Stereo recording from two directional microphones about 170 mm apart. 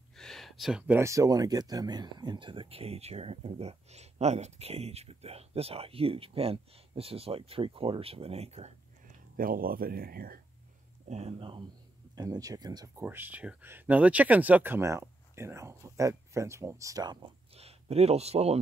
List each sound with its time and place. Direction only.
0.1 s speech: centre (ahead or behind); by 8.7 s 40° right (ahead or behind)
9.4 s speech: 55° right (ahead or behind)
11.1 s speech: 40° right (ahead or behind)